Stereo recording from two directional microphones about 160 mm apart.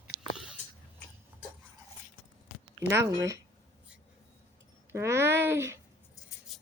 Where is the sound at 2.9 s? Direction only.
15° right (ahead or behind).